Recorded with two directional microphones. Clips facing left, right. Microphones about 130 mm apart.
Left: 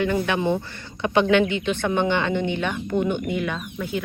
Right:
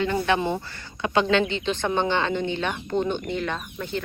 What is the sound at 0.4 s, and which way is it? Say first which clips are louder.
Speech: left 4 dB; 20° left (ahead or behind).